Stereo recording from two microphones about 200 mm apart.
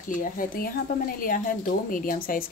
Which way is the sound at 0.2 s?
45° left (ahead or behind).